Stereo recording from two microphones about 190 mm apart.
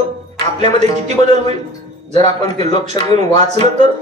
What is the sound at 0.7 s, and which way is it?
Speech, 35° right (ahead or behind).